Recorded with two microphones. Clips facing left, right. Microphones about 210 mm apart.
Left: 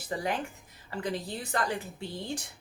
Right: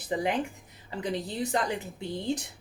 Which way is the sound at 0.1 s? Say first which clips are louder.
Right 4 dB; 20° right (ahead or behind).